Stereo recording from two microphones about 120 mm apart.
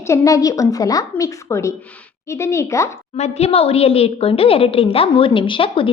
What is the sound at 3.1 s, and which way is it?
A woman's voice, 65° left (ahead or behind).